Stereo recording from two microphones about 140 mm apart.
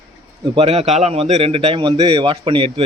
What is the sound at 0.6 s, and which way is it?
A man's voice, 45° right (ahead or behind).